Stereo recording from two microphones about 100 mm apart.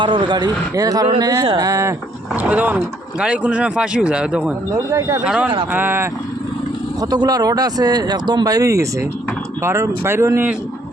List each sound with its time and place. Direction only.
0.0 s a man's voice: 50° right (ahead or behind); by 2.0 s 30° right (ahead or behind)
2.3 s speech: 15° right (ahead or behind)
4.9 s speech: 35° right (ahead or behind)
5.2 s speech: 10° right (ahead or behind)
5.7 s speech: 20° right (ahead or behind)
7.0 s speech: 40° right (ahead or behind); by 10.5 s 25° right (ahead or behind)